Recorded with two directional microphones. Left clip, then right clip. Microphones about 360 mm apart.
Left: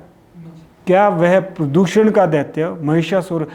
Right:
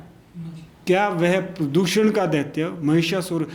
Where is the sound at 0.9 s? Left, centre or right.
Left.